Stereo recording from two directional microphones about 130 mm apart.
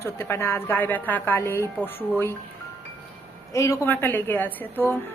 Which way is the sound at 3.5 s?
25° left (ahead or behind).